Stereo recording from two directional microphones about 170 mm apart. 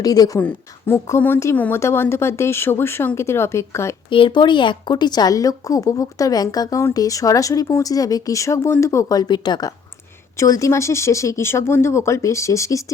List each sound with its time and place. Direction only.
0.0 s a woman's voice: 20° left (ahead or behind)
4.1 s a woman's voice: 30° left (ahead or behind)